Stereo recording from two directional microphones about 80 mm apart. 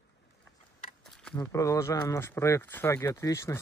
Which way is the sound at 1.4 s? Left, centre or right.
Left.